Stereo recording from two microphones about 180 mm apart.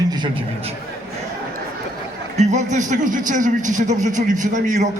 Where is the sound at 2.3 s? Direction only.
40° right (ahead or behind).